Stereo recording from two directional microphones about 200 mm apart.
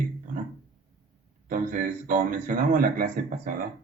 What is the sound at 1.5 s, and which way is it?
Speech, 40° right (ahead or behind).